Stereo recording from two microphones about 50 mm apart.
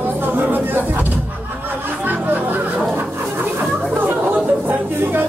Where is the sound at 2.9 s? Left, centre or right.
Right.